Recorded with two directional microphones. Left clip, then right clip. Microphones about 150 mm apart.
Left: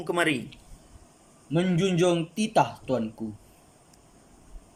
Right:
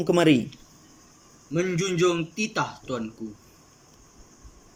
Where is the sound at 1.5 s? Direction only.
55° left (ahead or behind).